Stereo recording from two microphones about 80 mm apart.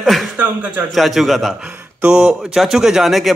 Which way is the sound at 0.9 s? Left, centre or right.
Centre.